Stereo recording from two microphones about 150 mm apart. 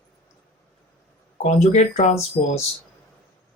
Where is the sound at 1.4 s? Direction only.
50° left (ahead or behind).